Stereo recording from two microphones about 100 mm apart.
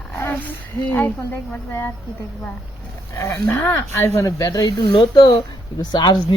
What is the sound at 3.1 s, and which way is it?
Speech, 30° left (ahead or behind).